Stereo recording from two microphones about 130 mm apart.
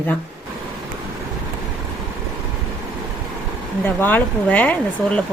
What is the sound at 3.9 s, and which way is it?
Speech, 15° left (ahead or behind).